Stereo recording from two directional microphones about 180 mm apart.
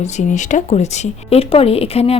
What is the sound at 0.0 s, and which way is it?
Speech, 40° left (ahead or behind).